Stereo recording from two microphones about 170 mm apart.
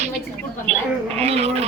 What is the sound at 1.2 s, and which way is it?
Music, 35° right (ahead or behind).